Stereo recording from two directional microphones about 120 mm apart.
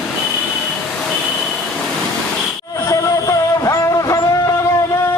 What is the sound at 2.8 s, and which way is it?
Music, 30° left (ahead or behind).